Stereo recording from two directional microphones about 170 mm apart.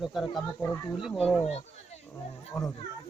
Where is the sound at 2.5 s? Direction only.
Centre (ahead or behind).